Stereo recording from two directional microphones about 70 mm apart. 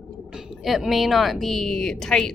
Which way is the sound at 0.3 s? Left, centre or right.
Centre.